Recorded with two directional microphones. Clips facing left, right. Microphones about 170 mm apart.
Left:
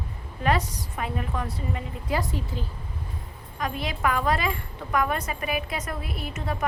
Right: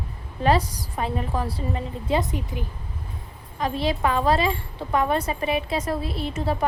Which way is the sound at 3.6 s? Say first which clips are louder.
Right 5 dB; 30° right (ahead or behind).